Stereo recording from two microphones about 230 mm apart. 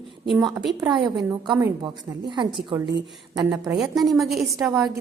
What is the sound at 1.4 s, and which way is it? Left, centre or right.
A woman's voice, centre.